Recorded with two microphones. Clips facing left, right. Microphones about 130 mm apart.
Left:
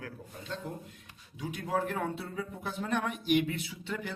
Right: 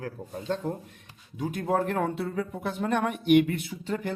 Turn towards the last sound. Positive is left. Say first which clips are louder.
# right 7 dB
turn(degrees=-40)  # may be behind; listen again after turning